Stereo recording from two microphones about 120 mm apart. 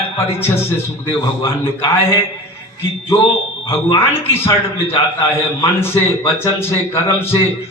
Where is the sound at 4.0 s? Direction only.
20° left (ahead or behind).